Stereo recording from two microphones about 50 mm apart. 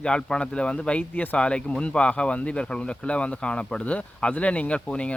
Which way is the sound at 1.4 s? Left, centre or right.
Left.